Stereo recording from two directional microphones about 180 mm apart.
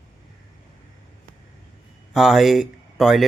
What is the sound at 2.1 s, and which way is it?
Speech, centre (ahead or behind).